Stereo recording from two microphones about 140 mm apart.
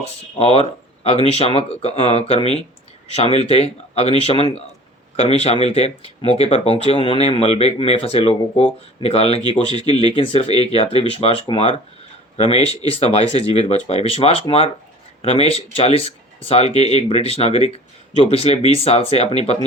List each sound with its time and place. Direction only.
0.3 s speech: 45° left (ahead or behind)